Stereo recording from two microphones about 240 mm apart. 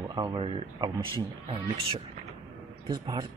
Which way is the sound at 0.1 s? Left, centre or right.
Centre.